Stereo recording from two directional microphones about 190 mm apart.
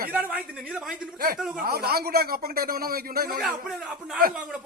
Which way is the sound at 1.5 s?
55° right (ahead or behind).